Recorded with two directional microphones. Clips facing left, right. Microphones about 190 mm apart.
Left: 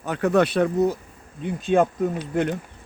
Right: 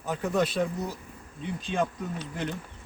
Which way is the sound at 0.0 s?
70° left (ahead or behind).